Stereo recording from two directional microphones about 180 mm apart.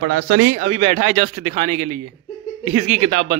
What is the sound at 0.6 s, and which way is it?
Speech, 35° right (ahead or behind).